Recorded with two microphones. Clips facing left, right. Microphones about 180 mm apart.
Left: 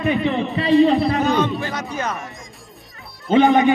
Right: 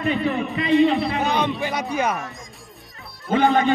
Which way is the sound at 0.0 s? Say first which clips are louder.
Left 3 dB; 25° left (ahead or behind).